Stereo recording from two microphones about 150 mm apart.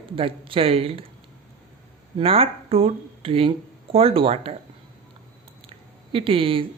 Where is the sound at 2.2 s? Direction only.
40° right (ahead or behind).